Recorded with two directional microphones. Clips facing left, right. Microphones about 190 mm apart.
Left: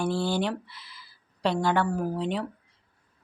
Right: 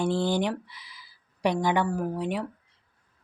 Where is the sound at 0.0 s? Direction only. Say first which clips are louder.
Right 1 dB; 20° right (ahead or behind).